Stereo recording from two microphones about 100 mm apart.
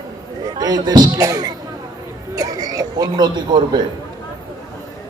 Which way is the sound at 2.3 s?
35° right (ahead or behind).